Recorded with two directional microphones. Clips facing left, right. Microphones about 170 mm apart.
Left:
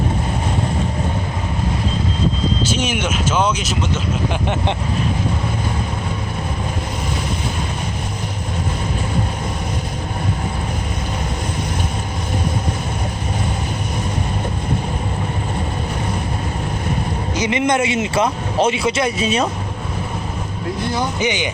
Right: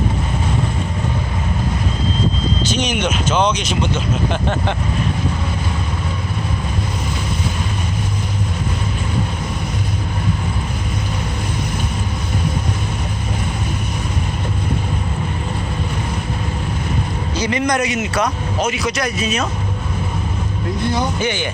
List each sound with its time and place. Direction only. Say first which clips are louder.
2.7 s speech: right 1 dB; 5° left (ahead or behind)
4.3 s vehicle: right 1 dB; 15° left (ahead or behind)
17.3 s speech: left 1 dB; 20° left (ahead or behind)
21.2 s vehicle: left 1 dB; 15° left (ahead or behind)